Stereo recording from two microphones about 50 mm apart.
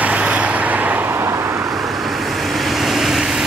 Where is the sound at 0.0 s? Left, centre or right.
Right.